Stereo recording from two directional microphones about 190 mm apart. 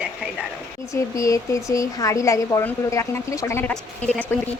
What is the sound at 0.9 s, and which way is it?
Speech, 15° left (ahead or behind).